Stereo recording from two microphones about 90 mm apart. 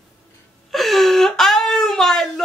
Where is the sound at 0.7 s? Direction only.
Centre (ahead or behind).